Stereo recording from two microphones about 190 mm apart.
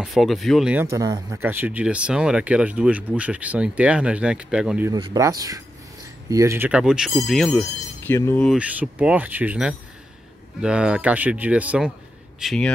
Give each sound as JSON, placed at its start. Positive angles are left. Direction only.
{"t": 0.0, "sound": "speech", "side_deg": 0}
{"t": 0.8, "sound": "speech", "side_deg": -15}
{"t": 4.9, "sound": "speech", "side_deg": -20}
{"t": 8.5, "sound": "speech", "side_deg": -5}